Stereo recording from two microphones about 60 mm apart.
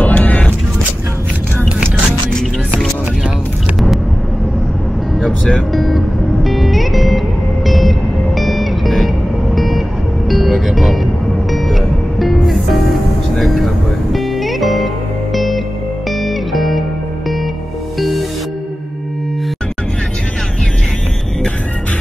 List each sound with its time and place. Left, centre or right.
0.0 s vehicle: left
5.2 s music: centre
17.9 s music: centre